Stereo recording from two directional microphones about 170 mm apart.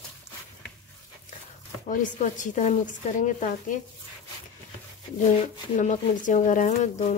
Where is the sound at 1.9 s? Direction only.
50° left (ahead or behind).